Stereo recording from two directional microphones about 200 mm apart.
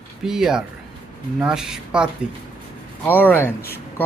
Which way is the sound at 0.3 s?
5° right (ahead or behind).